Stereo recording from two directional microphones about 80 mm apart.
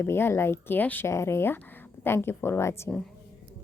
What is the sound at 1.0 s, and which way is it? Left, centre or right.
Speech, left.